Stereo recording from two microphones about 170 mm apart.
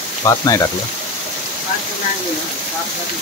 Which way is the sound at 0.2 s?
20° left (ahead or behind).